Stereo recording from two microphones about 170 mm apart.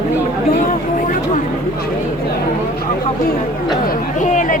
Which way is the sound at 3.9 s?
45° left (ahead or behind).